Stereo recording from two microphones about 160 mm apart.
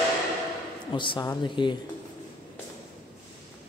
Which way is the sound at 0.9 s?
30° left (ahead or behind).